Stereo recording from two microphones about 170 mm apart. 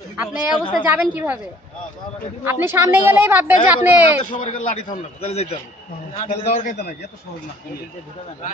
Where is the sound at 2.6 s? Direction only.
15° right (ahead or behind).